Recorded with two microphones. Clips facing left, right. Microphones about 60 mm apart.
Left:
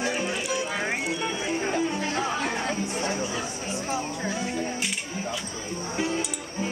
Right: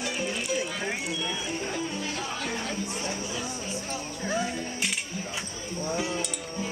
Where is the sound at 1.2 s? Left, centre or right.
Left.